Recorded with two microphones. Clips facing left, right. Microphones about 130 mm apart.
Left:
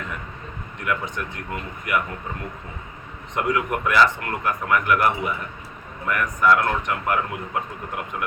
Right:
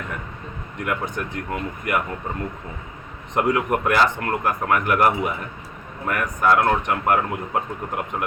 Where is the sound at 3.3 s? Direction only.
45° right (ahead or behind).